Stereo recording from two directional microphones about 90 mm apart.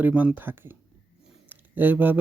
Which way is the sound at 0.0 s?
20° right (ahead or behind).